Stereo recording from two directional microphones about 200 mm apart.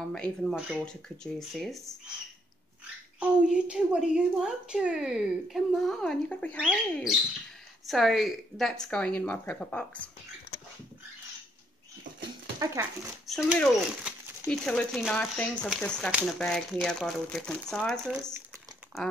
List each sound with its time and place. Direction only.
0.1 s a woman's voice: 5° left (ahead or behind)
3.2 s a woman's voice: 5° right (ahead or behind)
12.5 s speech: 15° right (ahead or behind)
13.3 s a woman's voice: centre (ahead or behind)